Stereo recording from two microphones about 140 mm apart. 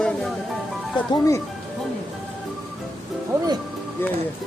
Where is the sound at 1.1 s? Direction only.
25° left (ahead or behind).